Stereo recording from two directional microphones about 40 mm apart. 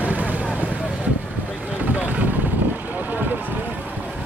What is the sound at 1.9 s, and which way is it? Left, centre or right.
Vehicle, right.